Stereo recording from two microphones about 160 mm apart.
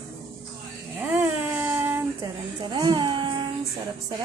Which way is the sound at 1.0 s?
10° right (ahead or behind).